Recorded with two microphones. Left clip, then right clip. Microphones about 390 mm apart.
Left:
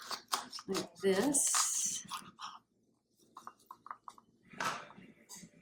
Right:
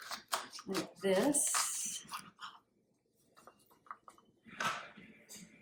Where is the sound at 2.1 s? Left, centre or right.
Centre.